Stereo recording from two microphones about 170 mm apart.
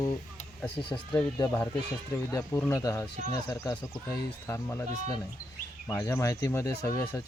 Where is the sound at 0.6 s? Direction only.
5° left (ahead or behind).